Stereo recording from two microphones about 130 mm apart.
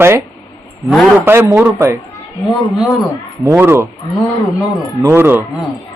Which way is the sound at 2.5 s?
Centre (ahead or behind).